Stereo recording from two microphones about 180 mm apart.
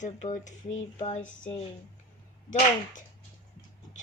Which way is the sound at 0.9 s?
40° left (ahead or behind).